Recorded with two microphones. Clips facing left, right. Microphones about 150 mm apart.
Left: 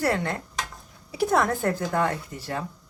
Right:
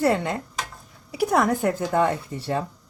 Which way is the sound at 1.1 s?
10° right (ahead or behind).